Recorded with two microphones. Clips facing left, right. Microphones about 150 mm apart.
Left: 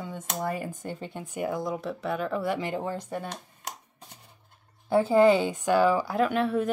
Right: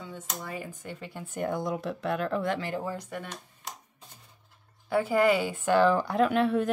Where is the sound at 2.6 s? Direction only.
20° left (ahead or behind).